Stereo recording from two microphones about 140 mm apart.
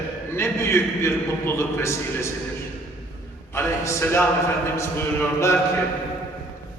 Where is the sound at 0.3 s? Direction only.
20° left (ahead or behind).